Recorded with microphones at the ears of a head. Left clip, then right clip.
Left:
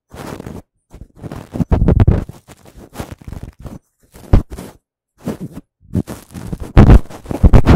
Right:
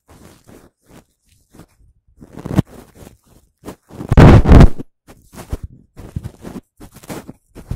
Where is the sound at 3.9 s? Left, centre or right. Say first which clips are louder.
Right 13 dB; right.